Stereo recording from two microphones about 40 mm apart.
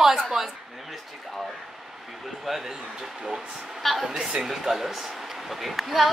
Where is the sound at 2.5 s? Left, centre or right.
Centre.